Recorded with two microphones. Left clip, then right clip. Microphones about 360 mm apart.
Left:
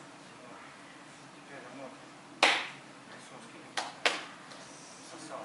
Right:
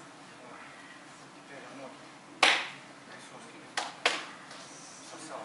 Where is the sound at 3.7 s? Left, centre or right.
Centre.